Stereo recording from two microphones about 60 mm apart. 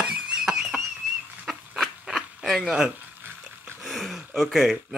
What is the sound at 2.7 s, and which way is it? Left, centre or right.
Speech, centre.